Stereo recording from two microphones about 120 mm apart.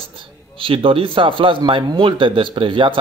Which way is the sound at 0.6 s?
50° right (ahead or behind).